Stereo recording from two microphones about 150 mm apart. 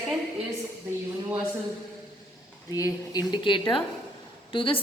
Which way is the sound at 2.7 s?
25° left (ahead or behind).